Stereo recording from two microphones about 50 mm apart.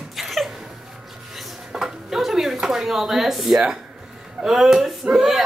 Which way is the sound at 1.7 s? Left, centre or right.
Centre.